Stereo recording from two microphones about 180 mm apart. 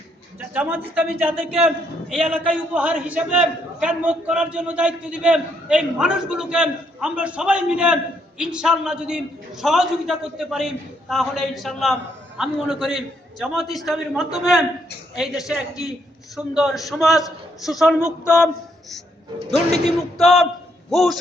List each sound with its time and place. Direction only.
0.3 s a man's voice: 10° right (ahead or behind)
19.5 s a man's voice: 65° right (ahead or behind)
20.1 s a man's voice: centre (ahead or behind)